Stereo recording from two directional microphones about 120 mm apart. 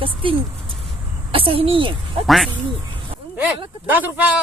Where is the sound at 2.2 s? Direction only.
Centre (ahead or behind).